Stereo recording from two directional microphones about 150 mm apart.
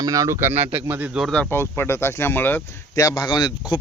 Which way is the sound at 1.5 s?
15° left (ahead or behind).